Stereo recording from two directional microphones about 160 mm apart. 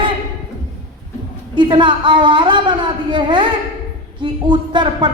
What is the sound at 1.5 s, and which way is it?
A woman's voice, 30° right (ahead or behind).